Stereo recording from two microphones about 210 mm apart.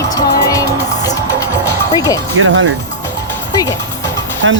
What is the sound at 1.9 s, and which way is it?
Speech, 15° left (ahead or behind).